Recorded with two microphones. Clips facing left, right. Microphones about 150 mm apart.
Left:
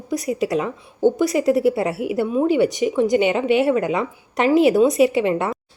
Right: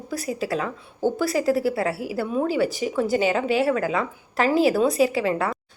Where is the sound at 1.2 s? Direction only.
20° left (ahead or behind).